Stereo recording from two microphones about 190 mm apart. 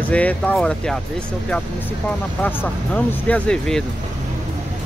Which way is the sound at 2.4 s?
10° left (ahead or behind).